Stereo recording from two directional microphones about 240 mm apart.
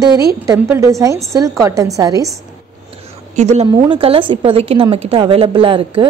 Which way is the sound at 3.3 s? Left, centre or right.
Right.